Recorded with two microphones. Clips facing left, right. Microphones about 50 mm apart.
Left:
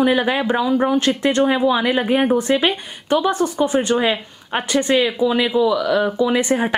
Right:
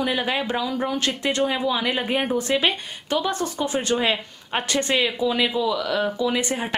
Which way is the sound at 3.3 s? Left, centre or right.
Left.